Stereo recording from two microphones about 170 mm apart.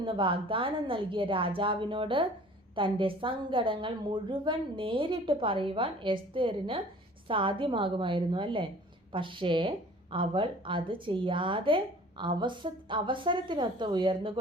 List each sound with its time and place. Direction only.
0.0 s a woman's voice: 30° right (ahead or behind)